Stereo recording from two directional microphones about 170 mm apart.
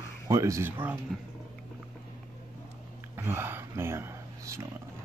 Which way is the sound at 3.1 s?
15° right (ahead or behind).